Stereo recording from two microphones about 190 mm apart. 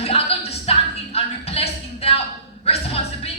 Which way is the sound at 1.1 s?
30° left (ahead or behind).